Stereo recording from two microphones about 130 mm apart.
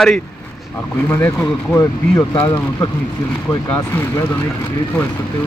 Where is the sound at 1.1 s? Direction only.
15° left (ahead or behind).